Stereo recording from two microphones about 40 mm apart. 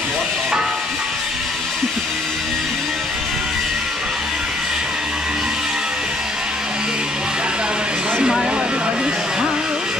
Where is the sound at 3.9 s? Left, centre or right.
Centre.